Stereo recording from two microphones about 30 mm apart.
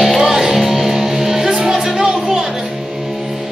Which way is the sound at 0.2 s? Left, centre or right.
Centre.